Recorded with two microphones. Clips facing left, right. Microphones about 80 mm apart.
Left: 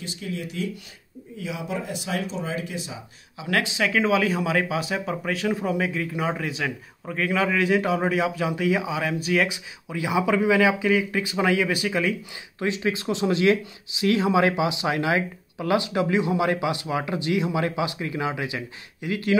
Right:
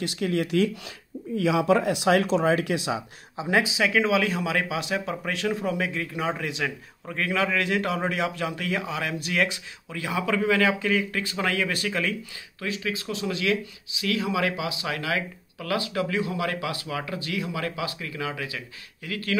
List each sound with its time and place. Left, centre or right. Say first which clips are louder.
0.0 s speech: right 6 dB; right
1.3 s speech: right 10 dB; right
3.4 s speech: right 1 dB; centre
12.5 s speech: left 5 dB; left